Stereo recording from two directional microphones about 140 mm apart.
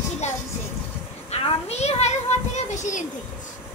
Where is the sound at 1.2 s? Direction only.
50° left (ahead or behind).